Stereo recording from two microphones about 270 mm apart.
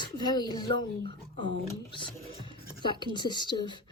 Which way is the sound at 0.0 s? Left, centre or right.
Centre.